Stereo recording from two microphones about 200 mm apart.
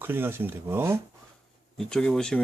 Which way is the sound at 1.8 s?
5° left (ahead or behind).